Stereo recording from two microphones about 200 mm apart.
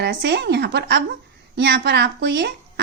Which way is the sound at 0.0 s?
60° right (ahead or behind).